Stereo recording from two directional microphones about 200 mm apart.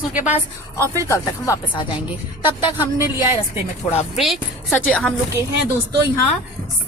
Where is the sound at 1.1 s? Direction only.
15° left (ahead or behind).